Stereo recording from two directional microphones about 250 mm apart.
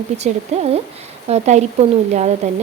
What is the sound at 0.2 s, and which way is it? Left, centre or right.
A woman's voice, right.